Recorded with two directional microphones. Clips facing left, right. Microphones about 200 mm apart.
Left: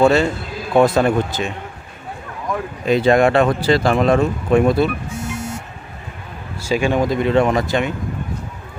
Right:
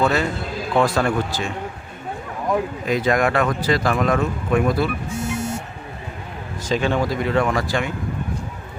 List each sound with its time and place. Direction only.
0.0 s speech: 30° left (ahead or behind)
2.8 s speech: 25° left (ahead or behind)
6.6 s speech: 10° left (ahead or behind)